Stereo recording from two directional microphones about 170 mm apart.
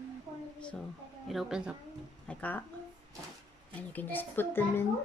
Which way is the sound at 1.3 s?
Centre (ahead or behind).